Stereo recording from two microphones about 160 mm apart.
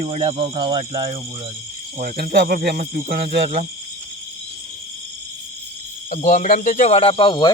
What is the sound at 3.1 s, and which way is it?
Speech, 75° right (ahead or behind).